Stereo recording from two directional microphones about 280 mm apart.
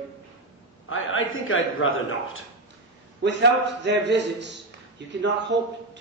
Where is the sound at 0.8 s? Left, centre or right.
Left.